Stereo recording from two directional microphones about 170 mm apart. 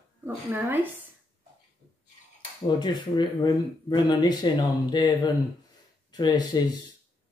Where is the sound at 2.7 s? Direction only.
25° left (ahead or behind).